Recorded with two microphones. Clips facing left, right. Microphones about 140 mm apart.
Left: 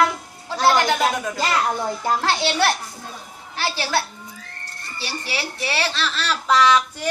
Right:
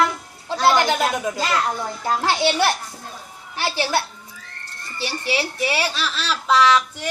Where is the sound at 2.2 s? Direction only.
15° right (ahead or behind).